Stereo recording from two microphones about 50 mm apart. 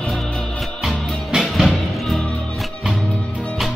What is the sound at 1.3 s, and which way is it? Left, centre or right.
Music, centre.